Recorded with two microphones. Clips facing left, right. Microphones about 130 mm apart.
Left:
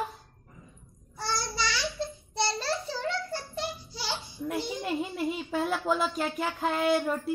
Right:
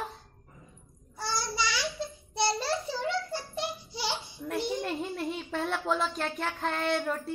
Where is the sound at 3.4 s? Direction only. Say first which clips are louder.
Even; 25° right (ahead or behind).